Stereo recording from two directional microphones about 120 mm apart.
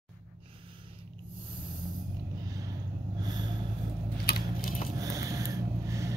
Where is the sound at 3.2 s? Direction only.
35° right (ahead or behind).